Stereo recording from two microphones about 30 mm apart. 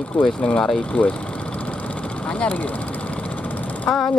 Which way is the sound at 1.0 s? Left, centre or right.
Left.